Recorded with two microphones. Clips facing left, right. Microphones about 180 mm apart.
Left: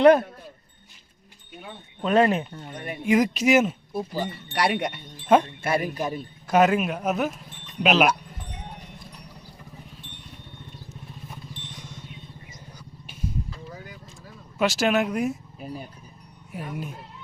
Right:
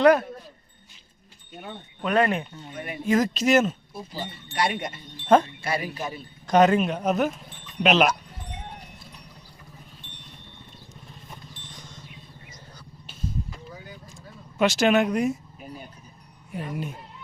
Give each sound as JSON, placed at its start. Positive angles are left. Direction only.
{"t": 0.0, "sound": "speech", "side_deg": 30}
{"t": 2.0, "sound": "speech", "side_deg": 25}
{"t": 2.2, "sound": "a man's voice", "side_deg": 5}
{"t": 3.9, "sound": "speech", "side_deg": 65}
{"t": 5.6, "sound": "speech", "side_deg": 55}
{"t": 6.5, "sound": "a man's voice", "side_deg": 5}
{"t": 11.7, "sound": "vehicle", "side_deg": 10}
{"t": 14.6, "sound": "a man's voice", "side_deg": 0}
{"t": 16.5, "sound": "speech", "side_deg": 0}